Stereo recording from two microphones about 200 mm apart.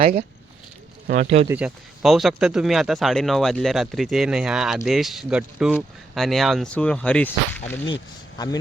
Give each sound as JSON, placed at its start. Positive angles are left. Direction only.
{"t": 0.0, "sound": "speech", "side_deg": -35}
{"t": 1.0, "sound": "speech", "side_deg": -45}
{"t": 1.5, "sound": "speech", "side_deg": -5}
{"t": 8.4, "sound": "a man's voice", "side_deg": 20}